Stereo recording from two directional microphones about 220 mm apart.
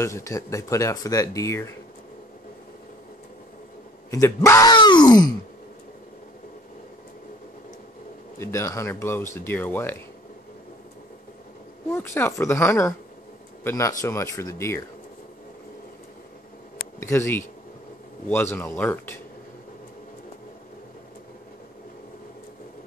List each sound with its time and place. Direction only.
0.0 s speech: 15° left (ahead or behind)
4.1 s speech: 15° left (ahead or behind)
8.4 s speech: 15° left (ahead or behind)
11.9 s speech: 10° left (ahead or behind)
17.0 s speech: 10° left (ahead or behind)